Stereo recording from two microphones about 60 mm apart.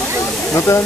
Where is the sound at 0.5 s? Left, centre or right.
Left.